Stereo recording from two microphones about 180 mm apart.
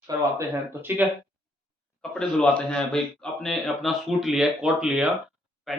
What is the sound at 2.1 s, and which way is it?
Speech, 5° left (ahead or behind).